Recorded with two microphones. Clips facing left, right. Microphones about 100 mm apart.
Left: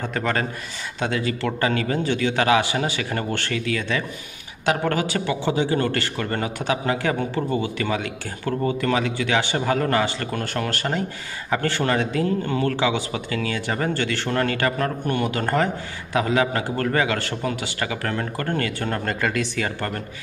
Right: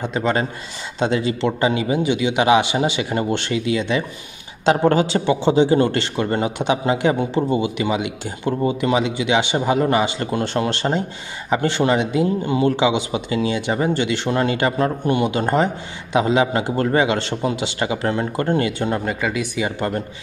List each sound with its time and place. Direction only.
0.0 s speech: 20° right (ahead or behind)
19.0 s speech: 5° right (ahead or behind)